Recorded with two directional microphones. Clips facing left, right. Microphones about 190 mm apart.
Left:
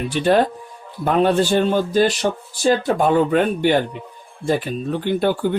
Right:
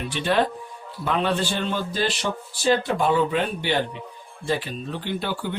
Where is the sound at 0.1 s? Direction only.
45° left (ahead or behind).